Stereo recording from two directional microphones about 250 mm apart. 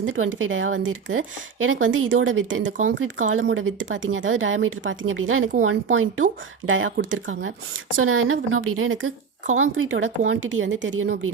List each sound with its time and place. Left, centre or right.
0.0 s a woman's voice: right